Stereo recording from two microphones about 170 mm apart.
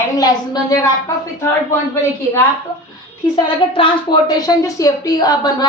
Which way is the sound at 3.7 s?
30° left (ahead or behind).